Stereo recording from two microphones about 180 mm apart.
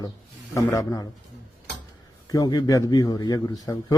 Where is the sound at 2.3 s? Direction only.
20° left (ahead or behind).